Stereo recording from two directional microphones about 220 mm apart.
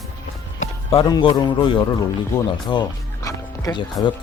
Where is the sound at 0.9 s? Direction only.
20° left (ahead or behind).